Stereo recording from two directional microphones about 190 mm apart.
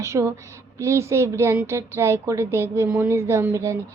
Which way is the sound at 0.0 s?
15° right (ahead or behind).